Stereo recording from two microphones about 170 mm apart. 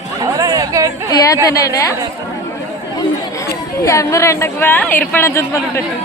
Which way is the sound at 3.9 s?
20° left (ahead or behind).